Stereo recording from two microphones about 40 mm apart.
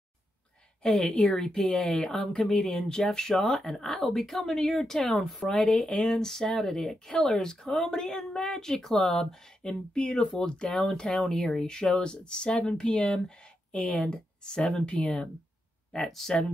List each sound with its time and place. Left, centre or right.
0.8 s speech: centre
2.6 s speech: left
3.0 s speech: centre
16.1 s speech: centre